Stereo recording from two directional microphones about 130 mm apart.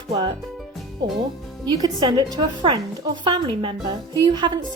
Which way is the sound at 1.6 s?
30° right (ahead or behind).